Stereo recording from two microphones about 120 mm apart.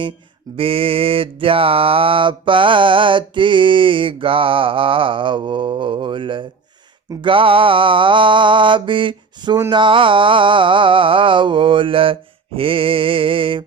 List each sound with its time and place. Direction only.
0.5 s mantra: 50° right (ahead or behind)